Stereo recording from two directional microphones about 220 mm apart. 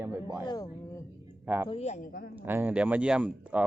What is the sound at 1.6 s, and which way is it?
Speech, 25° left (ahead or behind).